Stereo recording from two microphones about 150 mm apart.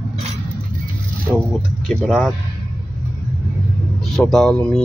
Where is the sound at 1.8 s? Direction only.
Centre (ahead or behind).